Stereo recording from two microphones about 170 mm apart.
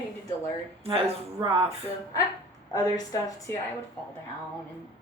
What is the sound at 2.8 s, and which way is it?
Speech, 20° left (ahead or behind).